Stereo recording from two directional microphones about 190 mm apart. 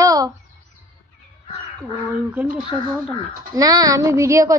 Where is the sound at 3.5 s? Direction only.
20° right (ahead or behind).